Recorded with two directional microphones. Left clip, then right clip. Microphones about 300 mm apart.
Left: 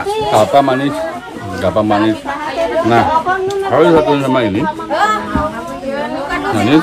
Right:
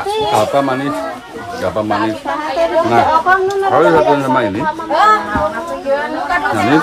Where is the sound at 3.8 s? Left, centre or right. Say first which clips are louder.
Left 1 dB; centre.